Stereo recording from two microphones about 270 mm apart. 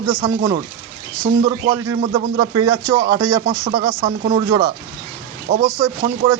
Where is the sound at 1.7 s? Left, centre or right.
Centre.